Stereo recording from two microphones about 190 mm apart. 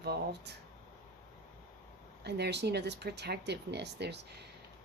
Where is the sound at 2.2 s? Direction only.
60° right (ahead or behind).